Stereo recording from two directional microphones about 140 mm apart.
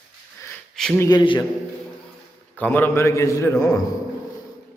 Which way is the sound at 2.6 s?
15° left (ahead or behind).